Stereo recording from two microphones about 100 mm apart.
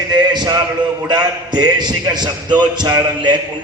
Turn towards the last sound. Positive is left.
turn(degrees=-40)  # may be behind; listen again after turning